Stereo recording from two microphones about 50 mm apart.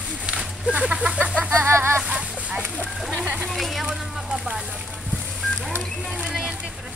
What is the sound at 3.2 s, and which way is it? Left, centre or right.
Speech, right.